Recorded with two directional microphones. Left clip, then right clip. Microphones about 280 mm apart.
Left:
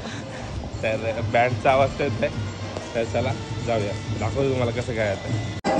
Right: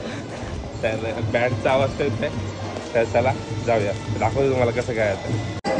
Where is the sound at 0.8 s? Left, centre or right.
Centre.